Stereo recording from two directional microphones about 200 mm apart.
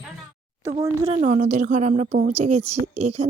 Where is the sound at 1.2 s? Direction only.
35° right (ahead or behind).